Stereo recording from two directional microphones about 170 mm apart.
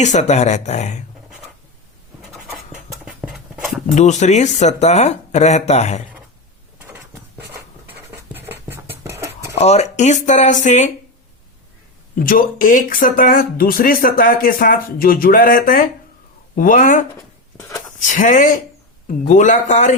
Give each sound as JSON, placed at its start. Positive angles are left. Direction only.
{"t": 0.0, "sound": "speech", "side_deg": 45}
{"t": 3.0, "sound": "dog", "side_deg": 0}
{"t": 3.9, "sound": "speech", "side_deg": 45}
{"t": 6.7, "sound": "a sound", "side_deg": -10}
{"t": 7.9, "sound": "writing", "side_deg": -15}
{"t": 9.6, "sound": "speech", "side_deg": 40}
{"t": 12.2, "sound": "speech", "side_deg": 55}
{"t": 17.6, "sound": "a sound", "side_deg": 15}
{"t": 18.0, "sound": "speech", "side_deg": 50}